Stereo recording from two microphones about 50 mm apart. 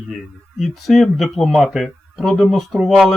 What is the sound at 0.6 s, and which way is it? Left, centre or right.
Speech, centre.